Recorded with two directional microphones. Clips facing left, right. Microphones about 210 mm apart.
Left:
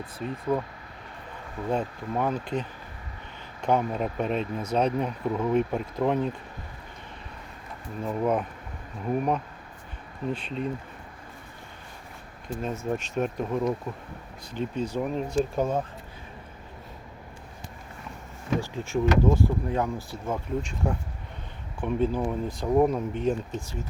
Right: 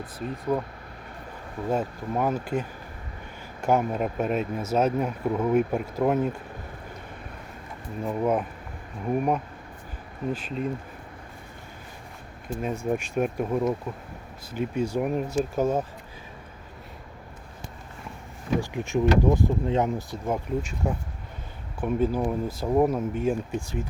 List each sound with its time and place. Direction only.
0.5 s speech: 10° right (ahead or behind)
1.7 s speech: 5° right (ahead or behind)
8.0 s speech: 5° right (ahead or behind)
12.6 s speech: 10° right (ahead or behind)
18.6 s speech: 15° right (ahead or behind)